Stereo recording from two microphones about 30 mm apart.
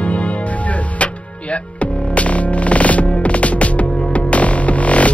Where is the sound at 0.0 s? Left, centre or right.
Left.